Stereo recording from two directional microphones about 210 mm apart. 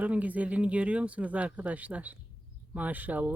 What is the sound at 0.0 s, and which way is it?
Speech, 5° right (ahead or behind).